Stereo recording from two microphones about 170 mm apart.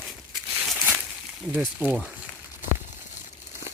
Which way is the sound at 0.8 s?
5° right (ahead or behind).